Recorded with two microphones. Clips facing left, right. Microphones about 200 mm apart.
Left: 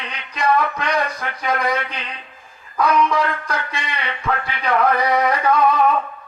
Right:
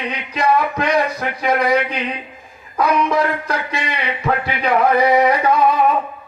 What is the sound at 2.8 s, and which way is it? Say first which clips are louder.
Speech: right 1 dB; 25° right (ahead or behind).